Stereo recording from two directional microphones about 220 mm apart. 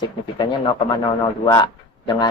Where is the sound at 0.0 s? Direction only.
20° left (ahead or behind).